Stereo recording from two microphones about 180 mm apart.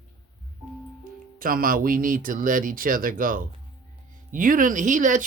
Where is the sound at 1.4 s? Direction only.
50° right (ahead or behind).